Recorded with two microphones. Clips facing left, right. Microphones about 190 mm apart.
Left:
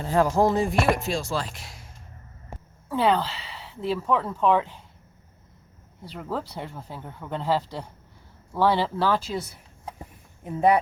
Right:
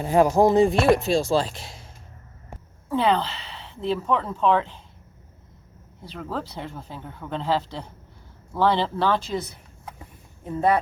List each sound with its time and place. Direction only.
0.0 s speech: 15° right (ahead or behind)
2.9 s speech: 5° left (ahead or behind)
6.1 s speech: 10° left (ahead or behind)